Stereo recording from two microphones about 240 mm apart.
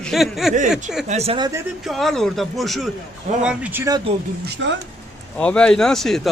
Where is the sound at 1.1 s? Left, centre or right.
Right.